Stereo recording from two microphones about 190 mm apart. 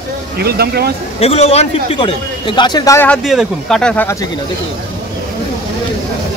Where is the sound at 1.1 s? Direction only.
30° left (ahead or behind); by 3.2 s 15° left (ahead or behind).